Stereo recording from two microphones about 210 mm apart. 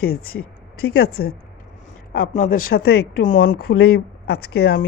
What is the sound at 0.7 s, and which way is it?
Speech, 90° left.